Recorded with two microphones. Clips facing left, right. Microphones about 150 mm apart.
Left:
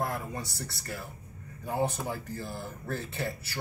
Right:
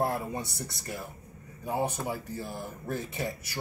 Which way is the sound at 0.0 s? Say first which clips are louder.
Right 4 dB; 35° right (ahead or behind).